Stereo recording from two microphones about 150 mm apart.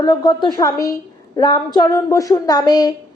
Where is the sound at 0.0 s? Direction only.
30° left (ahead or behind).